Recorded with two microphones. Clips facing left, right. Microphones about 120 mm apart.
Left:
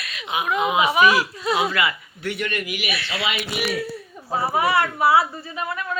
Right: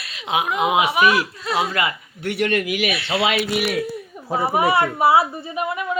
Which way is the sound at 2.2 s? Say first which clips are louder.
Right 6 dB; 70° right (ahead or behind).